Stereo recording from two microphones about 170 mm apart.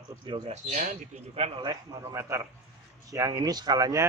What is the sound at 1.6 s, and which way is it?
Speech, 25° right (ahead or behind).